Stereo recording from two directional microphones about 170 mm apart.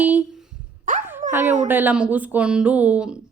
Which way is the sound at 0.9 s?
50° right (ahead or behind).